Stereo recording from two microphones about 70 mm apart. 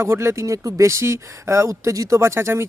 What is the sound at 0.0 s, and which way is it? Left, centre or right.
Speech, right.